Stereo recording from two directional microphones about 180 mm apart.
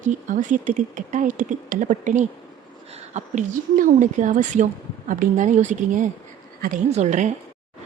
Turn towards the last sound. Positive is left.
turn(degrees=-40)  # may be behind; listen again after turning